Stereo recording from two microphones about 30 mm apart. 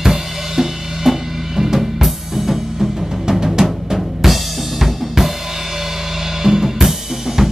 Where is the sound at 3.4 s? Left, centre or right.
Centre.